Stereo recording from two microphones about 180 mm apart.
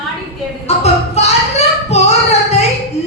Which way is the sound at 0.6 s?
35° left (ahead or behind).